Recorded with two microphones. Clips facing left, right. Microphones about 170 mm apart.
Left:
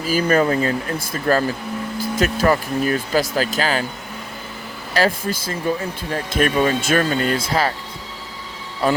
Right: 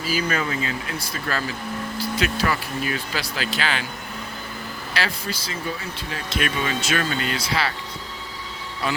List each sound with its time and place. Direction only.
0.0 s speech: 50° left (ahead or behind)
4.9 s speech: 45° left (ahead or behind)